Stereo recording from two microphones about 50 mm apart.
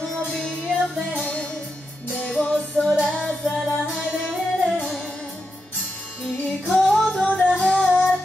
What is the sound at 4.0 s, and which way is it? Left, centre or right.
Music, right.